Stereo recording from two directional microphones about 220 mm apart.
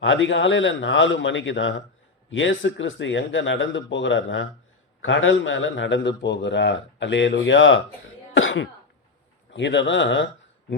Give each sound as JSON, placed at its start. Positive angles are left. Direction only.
{"t": 0.0, "sound": "a man's voice", "side_deg": 60}
{"t": 8.4, "sound": "cough", "side_deg": 60}
{"t": 9.5, "sound": "a man's voice", "side_deg": 55}